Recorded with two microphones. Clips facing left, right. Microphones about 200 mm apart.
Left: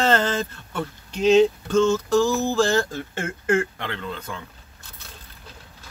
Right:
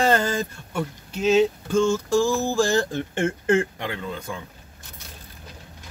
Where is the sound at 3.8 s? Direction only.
10° right (ahead or behind).